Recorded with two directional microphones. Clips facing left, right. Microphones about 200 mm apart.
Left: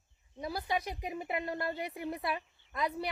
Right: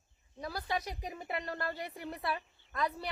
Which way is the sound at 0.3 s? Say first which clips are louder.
Left 2 dB; 15° left (ahead or behind).